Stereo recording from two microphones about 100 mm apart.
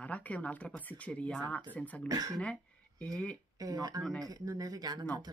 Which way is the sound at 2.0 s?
40° right (ahead or behind).